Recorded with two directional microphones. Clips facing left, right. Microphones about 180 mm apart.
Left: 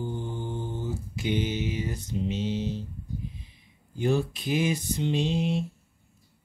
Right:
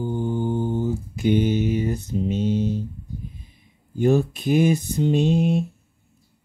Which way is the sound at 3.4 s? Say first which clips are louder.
Right 3 dB; 50° right (ahead or behind).